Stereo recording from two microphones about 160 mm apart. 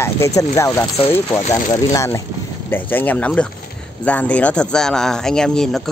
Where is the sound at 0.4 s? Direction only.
20° left (ahead or behind).